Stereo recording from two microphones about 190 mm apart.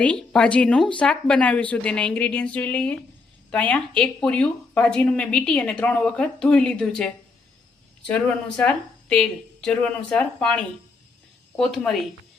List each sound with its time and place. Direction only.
0.0 s speech: 5° left (ahead or behind)